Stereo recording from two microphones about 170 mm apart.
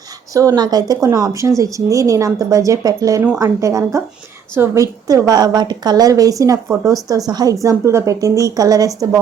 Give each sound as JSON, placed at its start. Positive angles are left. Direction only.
{"t": 0.3, "sound": "speech", "side_deg": -20}